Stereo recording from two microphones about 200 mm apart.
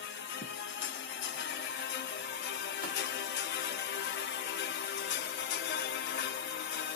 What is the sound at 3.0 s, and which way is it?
Music, 60° left (ahead or behind).